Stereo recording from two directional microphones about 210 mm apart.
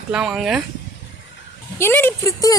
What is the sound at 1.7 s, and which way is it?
Speech, 10° left (ahead or behind).